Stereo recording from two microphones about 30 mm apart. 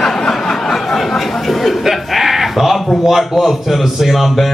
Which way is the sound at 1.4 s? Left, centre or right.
Centre.